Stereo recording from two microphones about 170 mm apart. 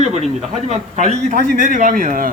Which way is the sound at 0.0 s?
40° right (ahead or behind).